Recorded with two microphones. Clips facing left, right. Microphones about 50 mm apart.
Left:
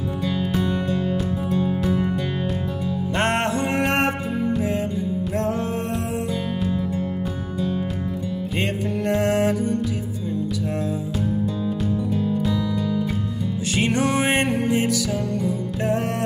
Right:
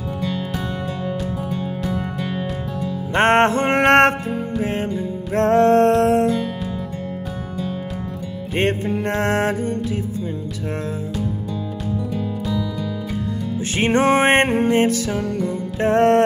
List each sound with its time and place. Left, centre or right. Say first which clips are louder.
0.2 s music: left 2 dB; centre
3.2 s music: right 8 dB; right
5.5 s music: right 12 dB; right
8.5 s music: right 6 dB; right
12.1 s music: left 2 dB; centre
13.7 s music: right 5 dB; right